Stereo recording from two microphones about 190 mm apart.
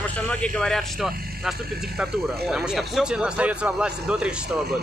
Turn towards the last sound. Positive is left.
turn(degrees=-5)  # may be behind; listen again after turning